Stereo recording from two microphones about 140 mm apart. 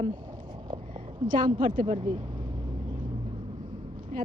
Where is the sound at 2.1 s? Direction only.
35° right (ahead or behind).